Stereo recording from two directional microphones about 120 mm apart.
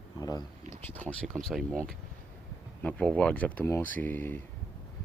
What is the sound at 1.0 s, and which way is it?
Speech, 90° right.